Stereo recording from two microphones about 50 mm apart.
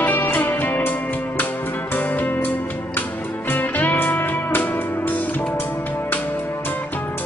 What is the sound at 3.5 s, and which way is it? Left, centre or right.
Music, left.